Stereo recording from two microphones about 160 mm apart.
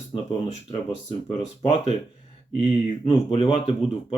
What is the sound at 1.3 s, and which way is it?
Speech, 40° left (ahead or behind).